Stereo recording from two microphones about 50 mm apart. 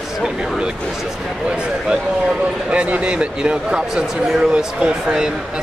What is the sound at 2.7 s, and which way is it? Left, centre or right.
Speech, right.